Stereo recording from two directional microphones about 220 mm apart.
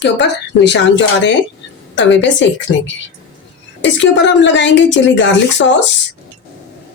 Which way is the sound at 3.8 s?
55° left (ahead or behind).